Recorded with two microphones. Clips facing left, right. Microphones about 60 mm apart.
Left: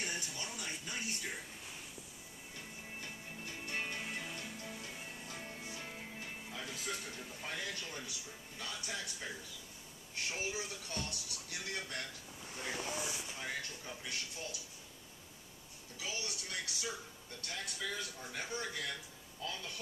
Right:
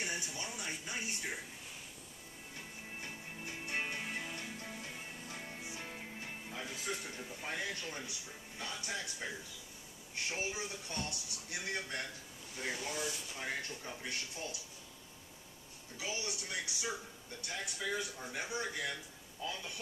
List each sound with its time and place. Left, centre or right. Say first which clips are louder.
0.0 s a sound: right 1 dB; centre
3.0 s music: right 2 dB; right
4.0 s music: right 1 dB; centre
6.5 s a sound: right 2 dB; centre
8.5 s speech: right 2 dB; right
10.3 s speech: right 1 dB; right
12.7 s speech: left 1 dB; left
13.4 s speech: right 4 dB; right
16.0 s speech: right 2 dB; right